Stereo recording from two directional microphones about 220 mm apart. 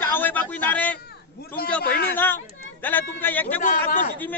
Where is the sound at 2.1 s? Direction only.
10° left (ahead or behind).